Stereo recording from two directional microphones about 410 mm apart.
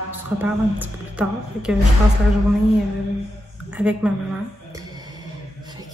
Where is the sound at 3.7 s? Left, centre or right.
Centre.